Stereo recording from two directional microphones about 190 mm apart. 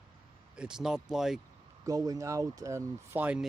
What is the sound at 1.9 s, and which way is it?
Speech, 20° right (ahead or behind).